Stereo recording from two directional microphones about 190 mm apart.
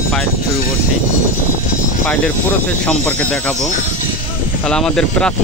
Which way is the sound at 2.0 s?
5° left (ahead or behind).